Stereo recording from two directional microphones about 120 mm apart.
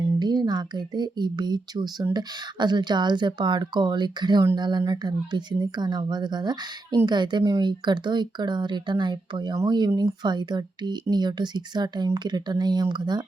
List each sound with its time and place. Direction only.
0.2 s speech: 35° right (ahead or behind)